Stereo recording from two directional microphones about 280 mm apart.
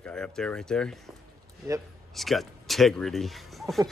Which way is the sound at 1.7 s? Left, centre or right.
Centre.